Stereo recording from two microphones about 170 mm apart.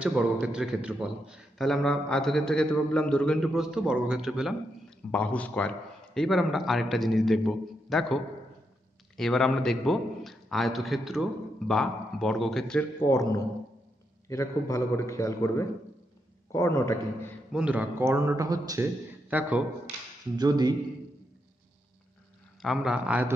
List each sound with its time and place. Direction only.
0.0 s a man's voice: 5° right (ahead or behind)
13.0 s a man's voice: 20° left (ahead or behind)
17.5 s a man's voice: 5° right (ahead or behind)
19.2 s speech: 10° right (ahead or behind)
20.3 s speech: 25° right (ahead or behind)
22.6 s a man's voice: centre (ahead or behind)